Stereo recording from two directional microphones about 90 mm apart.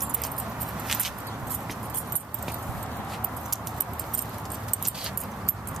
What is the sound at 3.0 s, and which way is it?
Horse, centre (ahead or behind).